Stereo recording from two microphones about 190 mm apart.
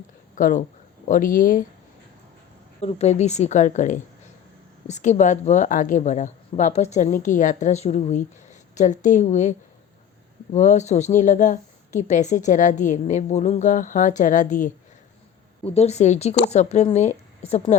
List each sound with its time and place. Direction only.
0.3 s speech: 45° left (ahead or behind)
2.8 s a woman's voice: 35° left (ahead or behind)